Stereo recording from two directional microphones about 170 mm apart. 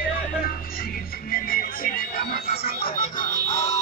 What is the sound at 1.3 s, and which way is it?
Music, 60° left (ahead or behind).